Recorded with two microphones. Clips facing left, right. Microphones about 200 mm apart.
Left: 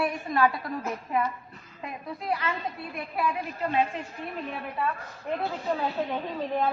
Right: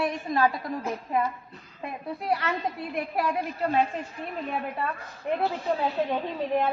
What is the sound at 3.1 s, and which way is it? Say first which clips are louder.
Speech: right 1 dB; 40° right (ahead or behind).